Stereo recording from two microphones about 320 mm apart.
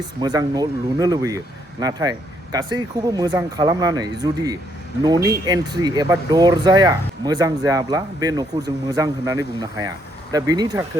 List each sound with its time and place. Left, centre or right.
0.0 s speech: centre